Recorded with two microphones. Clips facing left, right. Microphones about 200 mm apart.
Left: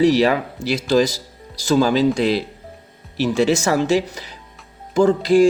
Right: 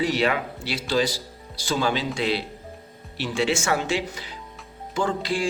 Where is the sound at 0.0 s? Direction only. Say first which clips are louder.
Left 8 dB; 40° left (ahead or behind).